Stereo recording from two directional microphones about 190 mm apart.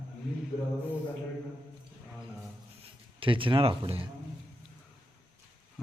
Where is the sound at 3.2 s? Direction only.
25° right (ahead or behind).